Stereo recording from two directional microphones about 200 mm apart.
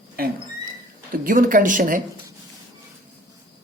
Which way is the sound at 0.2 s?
50° right (ahead or behind).